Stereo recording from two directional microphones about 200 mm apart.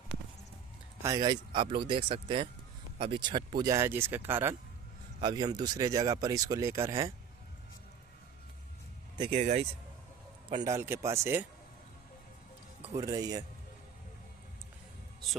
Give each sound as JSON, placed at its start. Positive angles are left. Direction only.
{"t": 1.0, "sound": "speech", "side_deg": -20}
{"t": 5.2, "sound": "speech", "side_deg": -20}
{"t": 9.1, "sound": "speech", "side_deg": -25}
{"t": 10.5, "sound": "speech", "side_deg": -15}
{"t": 12.9, "sound": "speech", "side_deg": -20}